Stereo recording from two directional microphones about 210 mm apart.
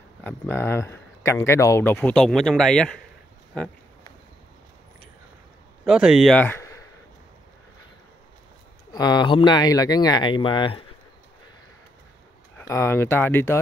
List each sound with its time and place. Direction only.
0.2 s speech: 10° left (ahead or behind)
5.9 s speech: 5° right (ahead or behind); by 6.8 s 10° left (ahead or behind)
8.9 s speech: 20° left (ahead or behind)
12.5 s speech: 15° left (ahead or behind)